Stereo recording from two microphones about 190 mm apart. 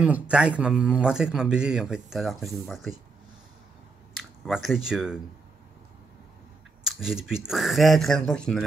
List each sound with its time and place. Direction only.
0.0 s a man's voice: 5° right (ahead or behind)
4.2 s speech: centre (ahead or behind)
6.8 s a man's voice: 5° right (ahead or behind)